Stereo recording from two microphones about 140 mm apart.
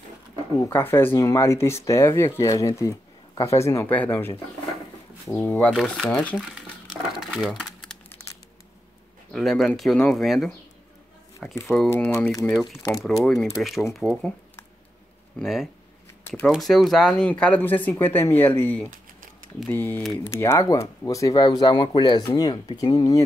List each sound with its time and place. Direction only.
0.7 s speech: 15° left (ahead or behind)
5.7 s speech: centre (ahead or behind)
6.3 s crumpling: 5° right (ahead or behind)
9.3 s speech: centre (ahead or behind)
11.6 s speech: centre (ahead or behind)
12.5 s speech: 25° left (ahead or behind)
13.0 s speech: centre (ahead or behind)
15.3 s speech: centre (ahead or behind); by 23.2 s 30° left (ahead or behind)